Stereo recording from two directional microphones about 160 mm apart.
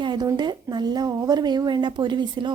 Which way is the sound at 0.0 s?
25° right (ahead or behind).